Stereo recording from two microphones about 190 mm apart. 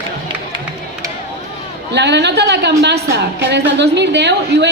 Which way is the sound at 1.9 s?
65° right (ahead or behind).